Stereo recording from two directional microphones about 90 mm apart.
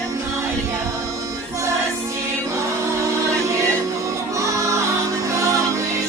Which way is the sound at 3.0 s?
35° right (ahead or behind).